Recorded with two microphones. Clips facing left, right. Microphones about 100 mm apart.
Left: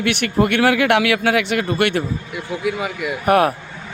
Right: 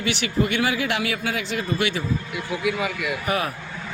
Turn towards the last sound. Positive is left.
turn(degrees=60)  # may be behind; listen again after turning